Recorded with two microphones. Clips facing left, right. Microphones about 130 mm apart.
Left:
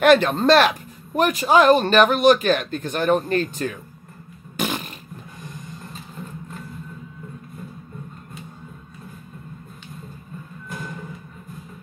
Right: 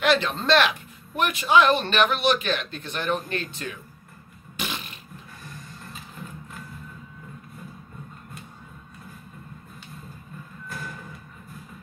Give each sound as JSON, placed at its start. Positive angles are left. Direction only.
{"t": 0.0, "sound": "a man's voice", "side_deg": 50}
{"t": 4.6, "sound": "fart", "side_deg": 45}
{"t": 10.7, "sound": "music", "side_deg": 20}